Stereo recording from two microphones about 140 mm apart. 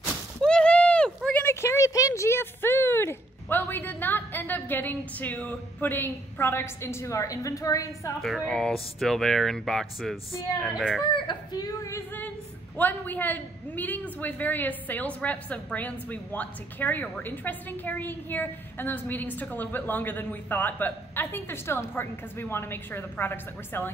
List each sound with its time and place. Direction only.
0.4 s a sound: 5° left (ahead or behind); by 8.1 s 25° left (ahead or behind)
8.2 s speech: 5° left (ahead or behind)
11.1 s a woman's voice: 30° left (ahead or behind); by 23.9 s 15° left (ahead or behind)